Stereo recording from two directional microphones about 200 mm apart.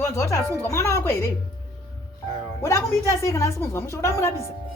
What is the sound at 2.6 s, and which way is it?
A woman's voice, 15° left (ahead or behind).